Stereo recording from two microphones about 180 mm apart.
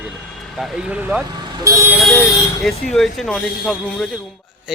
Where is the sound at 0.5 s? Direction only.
5° right (ahead or behind).